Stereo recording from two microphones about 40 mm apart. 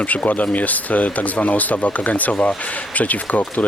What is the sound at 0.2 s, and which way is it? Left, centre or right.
Speech, left.